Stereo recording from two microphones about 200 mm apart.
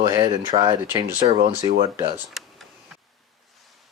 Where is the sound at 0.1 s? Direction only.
20° right (ahead or behind).